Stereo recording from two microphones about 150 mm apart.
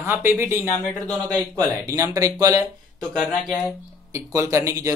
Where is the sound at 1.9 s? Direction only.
20° right (ahead or behind).